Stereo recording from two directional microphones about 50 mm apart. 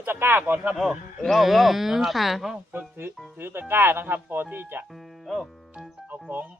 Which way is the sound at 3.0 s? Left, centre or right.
Right.